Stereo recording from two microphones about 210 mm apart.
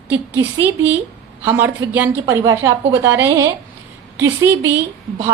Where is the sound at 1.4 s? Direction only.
10° right (ahead or behind).